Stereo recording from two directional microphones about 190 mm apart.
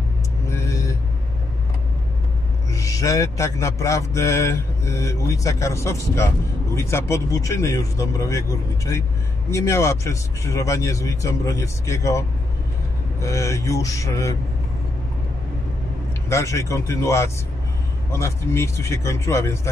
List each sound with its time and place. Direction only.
0.5 s vehicle: 15° left (ahead or behind)
2.7 s speech: 15° left (ahead or behind)
16.3 s speech: 15° left (ahead or behind)